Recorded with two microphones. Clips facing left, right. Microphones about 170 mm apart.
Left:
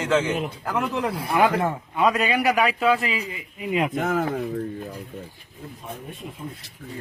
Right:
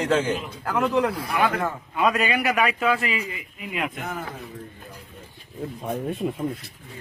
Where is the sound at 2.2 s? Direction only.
Centre (ahead or behind).